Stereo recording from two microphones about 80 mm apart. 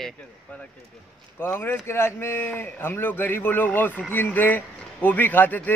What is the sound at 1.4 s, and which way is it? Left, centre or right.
Speech, left.